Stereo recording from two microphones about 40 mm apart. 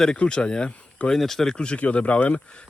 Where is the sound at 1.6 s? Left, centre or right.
Left.